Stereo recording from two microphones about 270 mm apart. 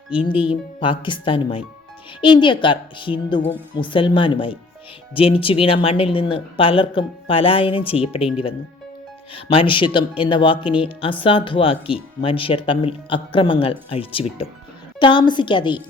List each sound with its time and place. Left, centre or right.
0.3 s a woman's voice: centre
9.3 s a woman's voice: centre